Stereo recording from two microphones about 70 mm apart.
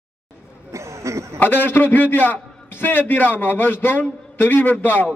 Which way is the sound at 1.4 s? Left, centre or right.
Left.